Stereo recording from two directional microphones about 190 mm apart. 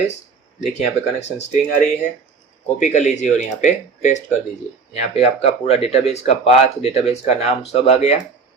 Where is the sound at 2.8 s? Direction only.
40° left (ahead or behind).